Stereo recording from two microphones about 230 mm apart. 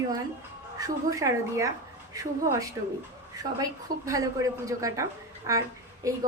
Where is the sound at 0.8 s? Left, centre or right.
Centre.